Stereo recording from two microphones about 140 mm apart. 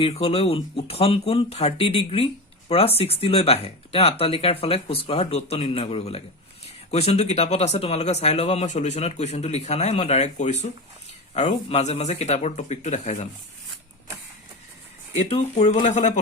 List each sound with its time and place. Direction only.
0.0 s speech: 45° left (ahead or behind)
15.1 s speech: 55° left (ahead or behind)